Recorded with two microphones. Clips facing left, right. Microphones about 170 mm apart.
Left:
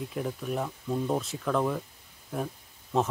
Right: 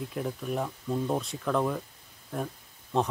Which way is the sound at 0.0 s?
Centre (ahead or behind).